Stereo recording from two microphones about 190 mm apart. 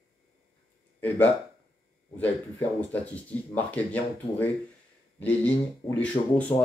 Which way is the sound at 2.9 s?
5° left (ahead or behind).